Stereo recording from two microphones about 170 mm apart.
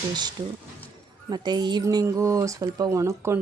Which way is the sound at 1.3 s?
25° right (ahead or behind).